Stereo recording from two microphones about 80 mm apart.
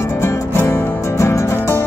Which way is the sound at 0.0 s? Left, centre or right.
Left.